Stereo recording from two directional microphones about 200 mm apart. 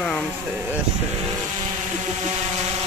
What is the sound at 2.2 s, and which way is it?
Vehicle, 35° right (ahead or behind).